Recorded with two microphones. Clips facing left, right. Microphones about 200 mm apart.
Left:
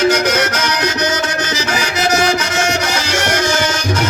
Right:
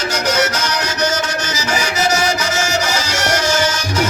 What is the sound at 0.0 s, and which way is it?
Music, 60° left (ahead or behind).